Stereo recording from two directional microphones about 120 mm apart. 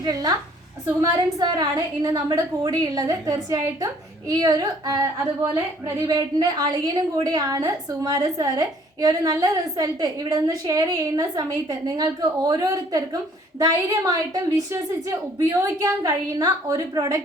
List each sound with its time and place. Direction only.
0.0 s a woman's voice: 35° right (ahead or behind)
1.4 s a woman's voice: 35° right (ahead or behind)